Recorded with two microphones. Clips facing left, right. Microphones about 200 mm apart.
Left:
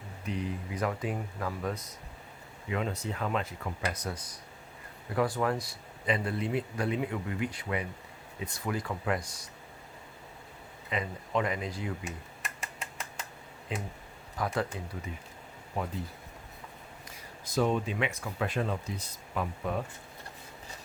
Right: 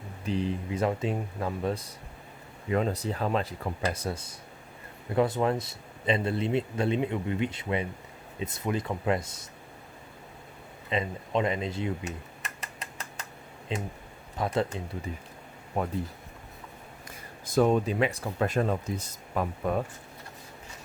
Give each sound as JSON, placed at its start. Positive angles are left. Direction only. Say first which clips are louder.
{"t": 0.3, "sound": "speech", "louder": "right 5 dB", "side_deg": -30}
{"t": 10.8, "sound": "speech", "louder": "right 4 dB", "side_deg": -25}
{"t": 13.7, "sound": "speech", "louder": "right 4 dB", "side_deg": -25}
{"t": 15.1, "sound": "speech", "louder": "right 4 dB", "side_deg": -35}
{"t": 15.8, "sound": "speech", "louder": "right 5 dB", "side_deg": -50}
{"t": 17.1, "sound": "speech", "louder": "right 3 dB", "side_deg": -50}